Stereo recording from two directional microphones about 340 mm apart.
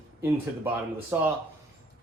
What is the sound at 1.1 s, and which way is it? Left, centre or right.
Speech, centre.